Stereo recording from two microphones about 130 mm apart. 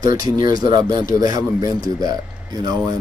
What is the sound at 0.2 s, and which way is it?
Speech, 30° right (ahead or behind).